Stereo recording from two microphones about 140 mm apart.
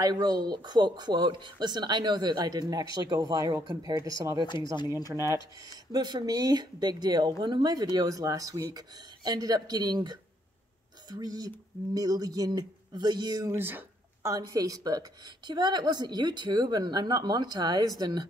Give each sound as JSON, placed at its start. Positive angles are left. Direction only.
{"t": 0.0, "sound": "speech", "side_deg": -30}
{"t": 4.7, "sound": "speech", "side_deg": 25}
{"t": 5.1, "sound": "speech", "side_deg": -20}
{"t": 5.9, "sound": "speech", "side_deg": -30}